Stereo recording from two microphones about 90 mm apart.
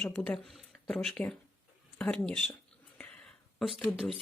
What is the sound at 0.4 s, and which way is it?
Speech, 5° left (ahead or behind).